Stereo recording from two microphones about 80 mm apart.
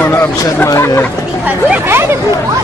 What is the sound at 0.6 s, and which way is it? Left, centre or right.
Speech, left.